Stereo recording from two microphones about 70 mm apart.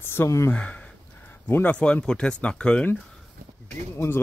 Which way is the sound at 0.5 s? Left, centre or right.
Centre.